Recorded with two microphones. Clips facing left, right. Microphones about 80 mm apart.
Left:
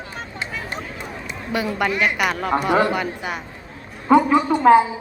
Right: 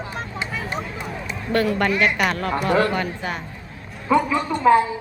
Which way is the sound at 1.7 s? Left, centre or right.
Centre.